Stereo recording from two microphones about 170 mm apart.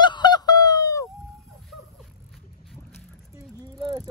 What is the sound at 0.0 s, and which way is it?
Honk, 25° left (ahead or behind).